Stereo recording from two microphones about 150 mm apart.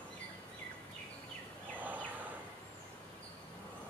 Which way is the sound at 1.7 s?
10° right (ahead or behind).